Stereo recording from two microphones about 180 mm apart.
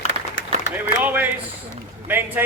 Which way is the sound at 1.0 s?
10° right (ahead or behind).